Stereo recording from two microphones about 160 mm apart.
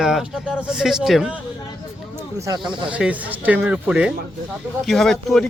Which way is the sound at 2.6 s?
5° right (ahead or behind).